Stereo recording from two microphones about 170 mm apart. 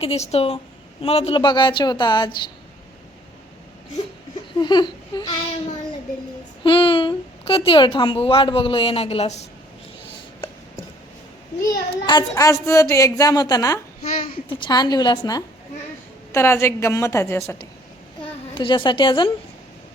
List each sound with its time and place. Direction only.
0.0 s a woman's voice: 35° left (ahead or behind)
4.6 s a woman's voice: 25° left (ahead or behind)
6.7 s a woman's voice: 30° left (ahead or behind)
11.6 s a woman's voice: 25° left (ahead or behind)
14.0 s a woman's voice: 35° left (ahead or behind); by 17.7 s 15° left (ahead or behind)
18.2 s a woman's voice: 30° left (ahead or behind)